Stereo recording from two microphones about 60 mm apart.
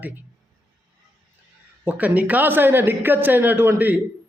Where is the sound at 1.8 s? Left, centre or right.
Right.